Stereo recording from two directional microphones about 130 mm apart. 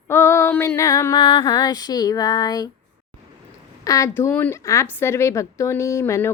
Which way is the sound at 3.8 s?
25° left (ahead or behind).